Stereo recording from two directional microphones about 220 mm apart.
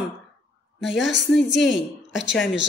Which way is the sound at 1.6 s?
55° left (ahead or behind).